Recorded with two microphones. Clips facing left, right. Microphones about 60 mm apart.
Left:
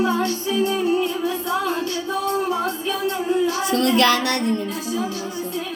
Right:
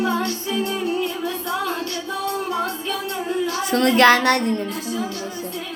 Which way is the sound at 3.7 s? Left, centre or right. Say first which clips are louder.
Right 5 dB; right.